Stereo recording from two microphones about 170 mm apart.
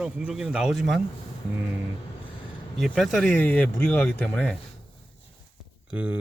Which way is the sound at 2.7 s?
Centre (ahead or behind).